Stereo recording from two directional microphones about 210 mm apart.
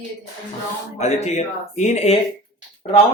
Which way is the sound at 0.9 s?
30° left (ahead or behind).